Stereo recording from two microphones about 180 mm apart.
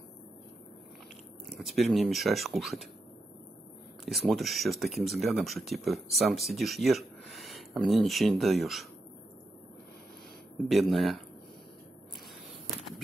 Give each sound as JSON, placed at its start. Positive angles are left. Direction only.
{"t": 1.6, "sound": "speech", "side_deg": 0}
{"t": 4.0, "sound": "speech", "side_deg": 0}
{"t": 10.7, "sound": "speech", "side_deg": 0}